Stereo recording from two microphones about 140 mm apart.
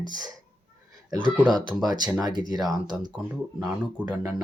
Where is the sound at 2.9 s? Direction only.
5° right (ahead or behind).